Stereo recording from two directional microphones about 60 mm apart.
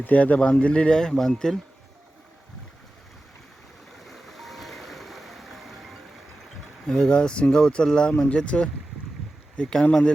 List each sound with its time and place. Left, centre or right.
0.0 s speech: left; by 1.5 s centre
4.0 s vehicle: centre
6.8 s speech: centre